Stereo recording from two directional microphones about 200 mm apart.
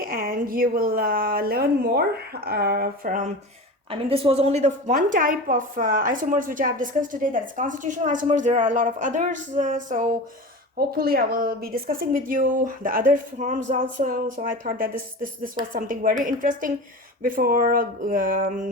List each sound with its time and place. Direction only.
0.0 s a woman's voice: 45° right (ahead or behind)
3.8 s a woman's voice: 30° right (ahead or behind)